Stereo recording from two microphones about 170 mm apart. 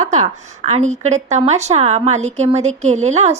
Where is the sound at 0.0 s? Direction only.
45° right (ahead or behind).